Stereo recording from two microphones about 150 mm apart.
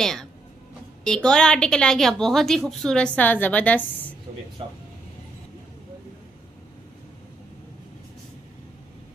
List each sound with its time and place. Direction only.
0.0 s a woman's voice: 5° left (ahead or behind)
4.6 s speech: 35° right (ahead or behind)